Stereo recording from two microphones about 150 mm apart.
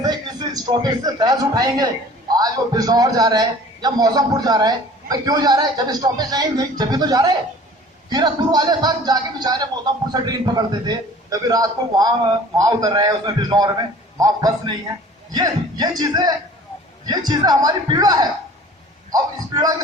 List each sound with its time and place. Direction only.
0.0 s a man's voice: 25° right (ahead or behind)